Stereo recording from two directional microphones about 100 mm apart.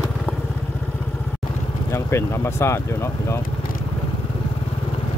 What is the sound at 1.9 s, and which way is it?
Speech, 25° left (ahead or behind).